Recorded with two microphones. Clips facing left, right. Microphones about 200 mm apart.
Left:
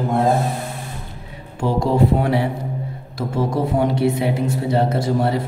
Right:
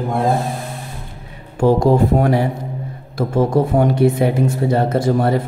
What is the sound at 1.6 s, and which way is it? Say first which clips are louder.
A man's voice: right 5 dB; 45° right (ahead or behind).